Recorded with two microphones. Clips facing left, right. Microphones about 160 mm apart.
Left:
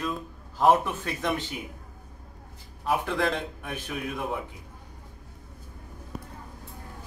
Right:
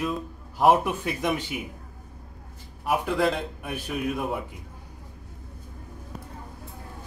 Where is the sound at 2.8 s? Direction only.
10° right (ahead or behind).